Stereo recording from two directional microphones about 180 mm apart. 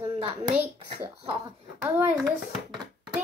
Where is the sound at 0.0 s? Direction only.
30° right (ahead or behind).